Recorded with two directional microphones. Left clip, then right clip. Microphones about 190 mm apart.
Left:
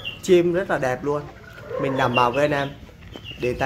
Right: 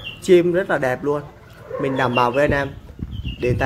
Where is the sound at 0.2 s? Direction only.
10° right (ahead or behind).